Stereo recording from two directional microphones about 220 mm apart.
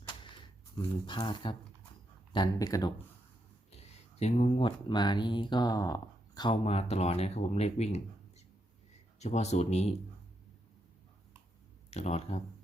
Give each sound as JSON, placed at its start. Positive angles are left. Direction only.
{"t": 0.8, "sound": "speech", "side_deg": 20}
{"t": 3.7, "sound": "speech", "side_deg": 30}
{"t": 9.1, "sound": "speech", "side_deg": 30}
{"t": 11.9, "sound": "speech", "side_deg": 30}